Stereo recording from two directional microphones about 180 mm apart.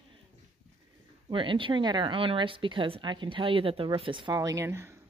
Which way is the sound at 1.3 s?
30° right (ahead or behind).